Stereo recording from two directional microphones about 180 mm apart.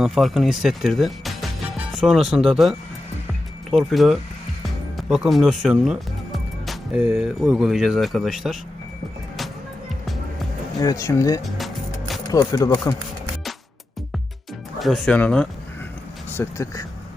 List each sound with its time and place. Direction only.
0.0 s speech: centre (ahead or behind)
10.8 s speech: 20° left (ahead or behind)
11.4 s music: centre (ahead or behind)
12.3 s speech: 20° left (ahead or behind)
14.8 s speech: centre (ahead or behind)
16.4 s speech: 15° left (ahead or behind)